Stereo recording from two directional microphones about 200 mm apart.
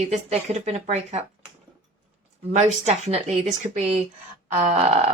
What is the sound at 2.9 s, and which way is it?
Speech, 35° right (ahead or behind).